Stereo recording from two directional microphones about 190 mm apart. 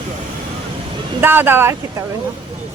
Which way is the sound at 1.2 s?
10° right (ahead or behind).